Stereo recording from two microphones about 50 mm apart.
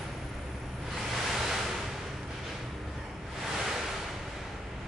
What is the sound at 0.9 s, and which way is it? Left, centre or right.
Waves, centre.